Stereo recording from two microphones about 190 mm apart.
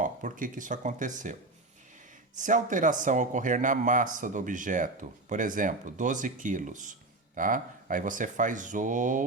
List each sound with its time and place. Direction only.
0.0 s speech: 45° right (ahead or behind)
2.4 s speech: 40° right (ahead or behind)